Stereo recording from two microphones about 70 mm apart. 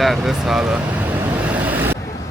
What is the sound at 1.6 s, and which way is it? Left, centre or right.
Vehicle, right.